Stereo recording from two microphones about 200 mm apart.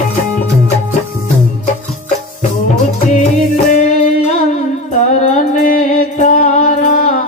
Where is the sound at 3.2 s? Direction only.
35° left (ahead or behind).